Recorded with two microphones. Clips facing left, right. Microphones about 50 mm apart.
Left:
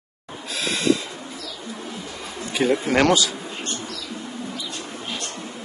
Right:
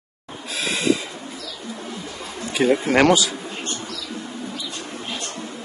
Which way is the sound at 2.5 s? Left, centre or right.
Centre.